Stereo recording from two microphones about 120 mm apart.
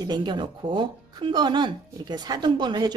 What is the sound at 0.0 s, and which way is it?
Speech, 35° right (ahead or behind).